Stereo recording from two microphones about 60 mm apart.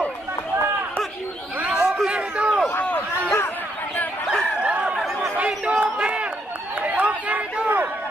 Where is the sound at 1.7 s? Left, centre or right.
Centre.